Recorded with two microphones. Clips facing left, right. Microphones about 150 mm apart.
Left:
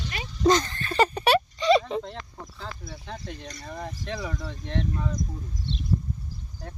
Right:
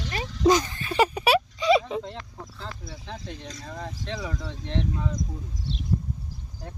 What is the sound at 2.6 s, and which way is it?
Speech, centre (ahead or behind).